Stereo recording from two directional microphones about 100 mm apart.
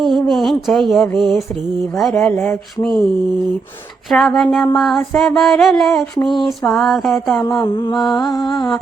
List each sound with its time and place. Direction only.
0.0 s mantra: centre (ahead or behind)
2.0 s speech: 10° left (ahead or behind)
4.1 s mantra: centre (ahead or behind)
7.7 s mantra: 50° left (ahead or behind)
8.1 s music: 40° left (ahead or behind)